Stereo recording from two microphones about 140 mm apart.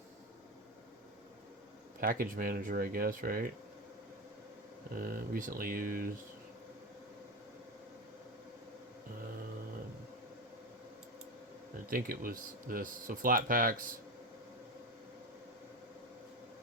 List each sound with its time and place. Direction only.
2.0 s speech: 90° right
4.9 s speech: 90° right
11.9 s speech: 90° right